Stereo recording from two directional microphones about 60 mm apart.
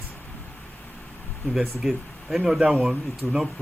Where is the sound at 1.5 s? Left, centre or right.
Centre.